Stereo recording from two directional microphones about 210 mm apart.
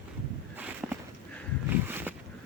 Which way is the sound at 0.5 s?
10° right (ahead or behind).